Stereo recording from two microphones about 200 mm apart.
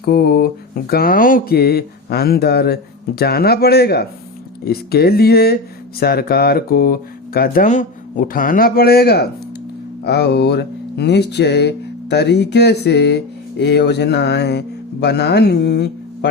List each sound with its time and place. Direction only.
0.0 s speech: 50° left (ahead or behind)